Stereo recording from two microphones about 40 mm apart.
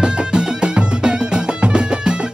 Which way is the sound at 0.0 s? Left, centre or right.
Right.